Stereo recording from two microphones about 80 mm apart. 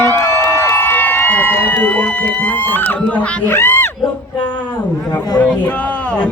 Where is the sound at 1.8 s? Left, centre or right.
Centre.